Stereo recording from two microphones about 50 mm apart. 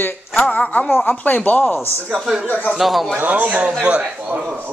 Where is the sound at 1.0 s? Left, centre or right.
Left.